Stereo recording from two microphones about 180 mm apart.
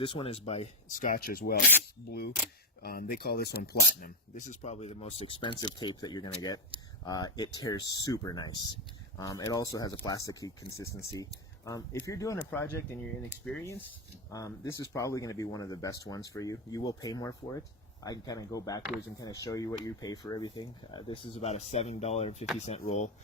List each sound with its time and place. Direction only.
0.0 s speech: 30° left (ahead or behind); by 4.1 s 60° left (ahead or behind)
4.4 s speech: 40° left (ahead or behind); by 12.6 s 15° left (ahead or behind)
14.3 s speech: 20° left (ahead or behind); by 23.1 s 40° left (ahead or behind)